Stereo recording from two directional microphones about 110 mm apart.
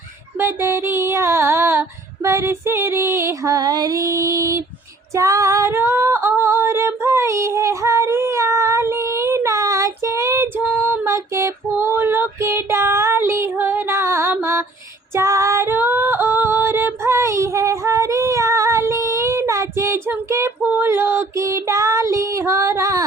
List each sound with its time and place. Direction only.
0.3 s female singing: 20° right (ahead or behind)
10.6 s female singing: 15° right (ahead or behind)